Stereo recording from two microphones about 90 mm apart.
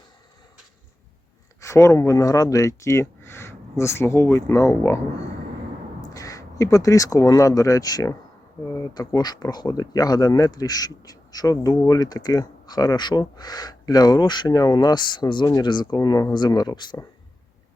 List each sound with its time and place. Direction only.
1.6 s speech: 30° left (ahead or behind)
6.0 s speech: 40° left (ahead or behind); by 16.0 s 55° left (ahead or behind)
16.0 s speech: 40° left (ahead or behind)
16.3 s speech: 50° left (ahead or behind)